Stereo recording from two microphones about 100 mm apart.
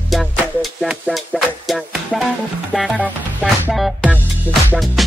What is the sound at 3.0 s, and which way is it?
Music, 15° right (ahead or behind).